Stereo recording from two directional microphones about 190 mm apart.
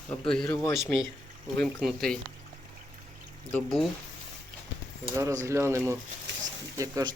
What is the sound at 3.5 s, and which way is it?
Speech, centre (ahead or behind).